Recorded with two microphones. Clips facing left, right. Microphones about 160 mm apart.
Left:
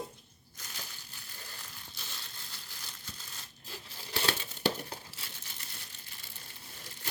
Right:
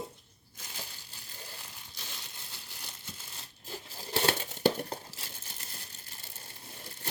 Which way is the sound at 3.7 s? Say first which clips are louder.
Right 5 dB; 40° right (ahead or behind).